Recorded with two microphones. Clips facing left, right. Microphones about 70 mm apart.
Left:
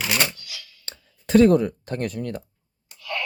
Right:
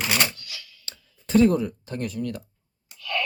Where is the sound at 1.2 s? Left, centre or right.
Left.